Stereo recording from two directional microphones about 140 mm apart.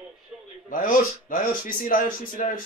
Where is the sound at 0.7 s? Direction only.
80° left.